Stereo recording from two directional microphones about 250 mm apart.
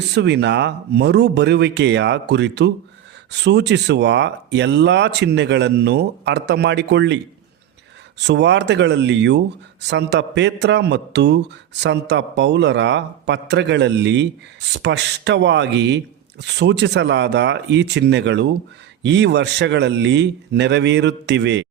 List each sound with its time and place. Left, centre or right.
0.1 s speech: right
8.2 s speech: right